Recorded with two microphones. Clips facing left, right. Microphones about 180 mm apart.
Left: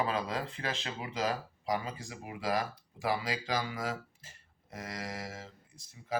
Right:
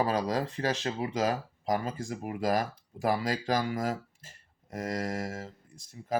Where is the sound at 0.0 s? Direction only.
40° right (ahead or behind).